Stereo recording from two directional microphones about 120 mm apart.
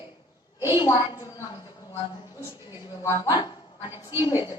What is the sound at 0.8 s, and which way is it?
Speech, 35° left (ahead or behind).